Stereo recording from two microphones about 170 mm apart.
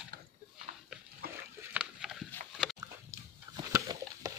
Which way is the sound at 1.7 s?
5° right (ahead or behind).